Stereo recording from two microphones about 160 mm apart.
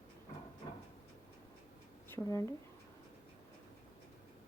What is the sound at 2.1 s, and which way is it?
Speech, 15° left (ahead or behind).